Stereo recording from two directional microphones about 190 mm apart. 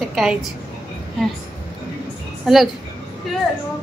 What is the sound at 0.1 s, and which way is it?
Speech, centre (ahead or behind).